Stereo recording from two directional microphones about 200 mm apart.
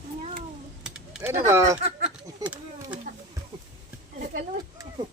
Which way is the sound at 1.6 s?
35° right (ahead or behind).